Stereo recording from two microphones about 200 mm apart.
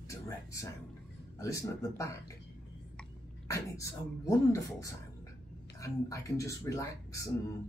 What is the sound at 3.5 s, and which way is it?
Speech, 15° left (ahead or behind).